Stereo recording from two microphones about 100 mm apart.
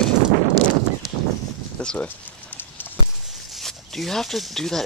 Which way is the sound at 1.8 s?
10° left (ahead or behind).